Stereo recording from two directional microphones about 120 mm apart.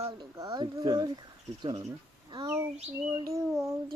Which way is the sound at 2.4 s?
25° right (ahead or behind).